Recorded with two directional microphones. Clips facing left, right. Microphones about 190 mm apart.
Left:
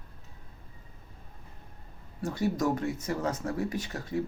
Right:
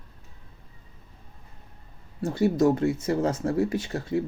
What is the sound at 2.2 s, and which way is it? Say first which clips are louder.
Speech: right 7 dB; 25° right (ahead or behind).